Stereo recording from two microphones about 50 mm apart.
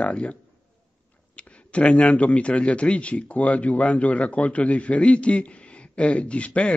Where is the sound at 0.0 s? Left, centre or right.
Left.